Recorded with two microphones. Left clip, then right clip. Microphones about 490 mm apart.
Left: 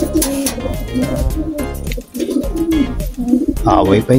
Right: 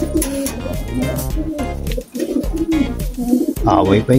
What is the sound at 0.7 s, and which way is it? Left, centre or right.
Speech, centre.